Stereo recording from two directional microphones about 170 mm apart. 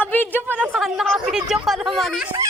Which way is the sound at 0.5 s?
5° right (ahead or behind).